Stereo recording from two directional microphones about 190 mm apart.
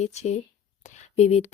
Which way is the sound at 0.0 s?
35° left (ahead or behind).